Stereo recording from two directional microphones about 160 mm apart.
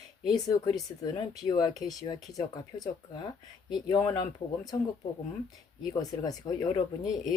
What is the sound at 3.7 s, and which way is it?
Speech, 25° left (ahead or behind).